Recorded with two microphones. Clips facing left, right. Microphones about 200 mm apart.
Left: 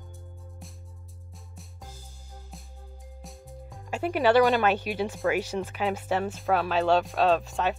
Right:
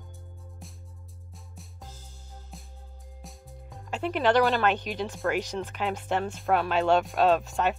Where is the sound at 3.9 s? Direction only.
10° left (ahead or behind).